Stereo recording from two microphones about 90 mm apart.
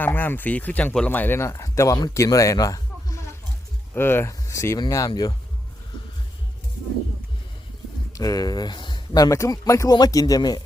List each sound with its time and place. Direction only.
0.0 s speech: 20° left (ahead or behind); by 3.2 s 40° left (ahead or behind)
3.9 s speech: 25° left (ahead or behind); by 5.3 s 45° left (ahead or behind)
8.1 s speech: 40° left (ahead or behind)